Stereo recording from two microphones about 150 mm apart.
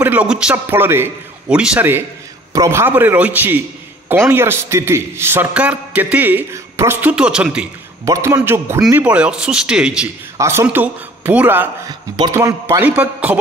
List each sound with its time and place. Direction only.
0.0 s a man's voice: 10° right (ahead or behind)
8.0 s a man's voice: 20° right (ahead or behind)
10.3 s a man's voice: 20° right (ahead or behind)